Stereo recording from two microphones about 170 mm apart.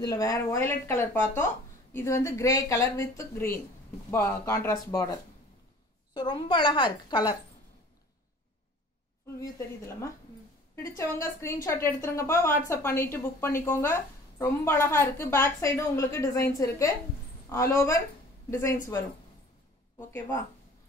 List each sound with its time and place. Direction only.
0.0 s a woman's voice: 20° left (ahead or behind)
6.1 s a woman's voice: 30° left (ahead or behind)
9.4 s a woman's voice: 20° left (ahead or behind)
20.1 s a woman's voice: 15° left (ahead or behind)